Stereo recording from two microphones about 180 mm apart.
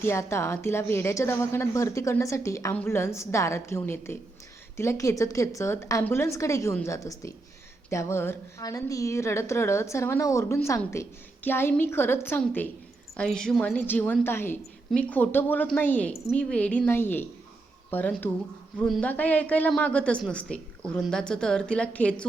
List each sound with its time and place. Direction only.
0.0 s a woman's voice: 15° left (ahead or behind)